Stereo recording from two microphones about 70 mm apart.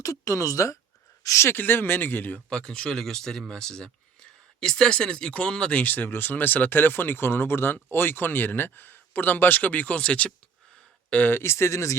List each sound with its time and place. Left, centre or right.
0.0 s speech: left
1.5 s speech: left
2.5 s speech: centre; by 11.9 s left